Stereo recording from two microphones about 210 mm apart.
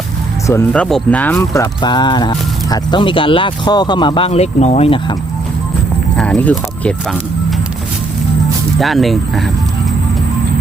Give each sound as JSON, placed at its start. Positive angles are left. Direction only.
{"t": 0.4, "sound": "speech", "side_deg": 10}
{"t": 6.1, "sound": "speech", "side_deg": 5}
{"t": 8.8, "sound": "speech", "side_deg": 0}